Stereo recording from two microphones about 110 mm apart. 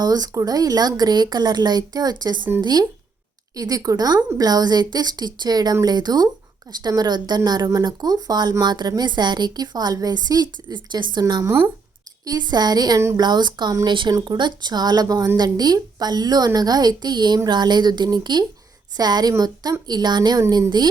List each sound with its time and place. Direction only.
0.0 s a woman's voice: 35° right (ahead or behind)
11.4 s speech: 20° right (ahead or behind)
12.2 s a woman's voice: 35° right (ahead or behind)